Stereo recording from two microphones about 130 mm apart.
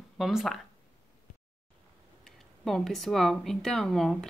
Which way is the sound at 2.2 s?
5° left (ahead or behind).